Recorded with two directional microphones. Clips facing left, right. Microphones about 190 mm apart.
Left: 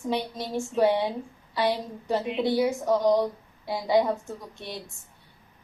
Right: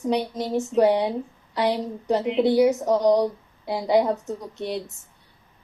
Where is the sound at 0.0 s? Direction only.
20° right (ahead or behind).